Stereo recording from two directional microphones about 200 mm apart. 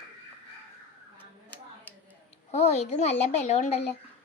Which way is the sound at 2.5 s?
35° left (ahead or behind).